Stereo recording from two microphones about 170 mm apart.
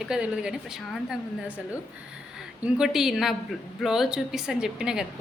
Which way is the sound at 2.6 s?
5° right (ahead or behind).